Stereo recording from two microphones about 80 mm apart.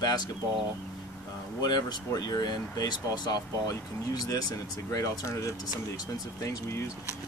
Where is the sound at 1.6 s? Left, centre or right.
Left.